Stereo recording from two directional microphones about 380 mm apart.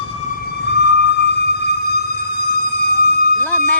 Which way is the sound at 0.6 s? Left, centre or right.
Left.